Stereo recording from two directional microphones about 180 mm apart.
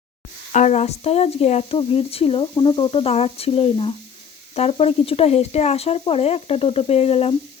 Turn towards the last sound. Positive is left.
turn(degrees=35)  # may be behind; listen again after turning